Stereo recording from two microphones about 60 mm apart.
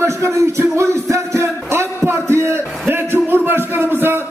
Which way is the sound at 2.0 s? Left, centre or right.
Right.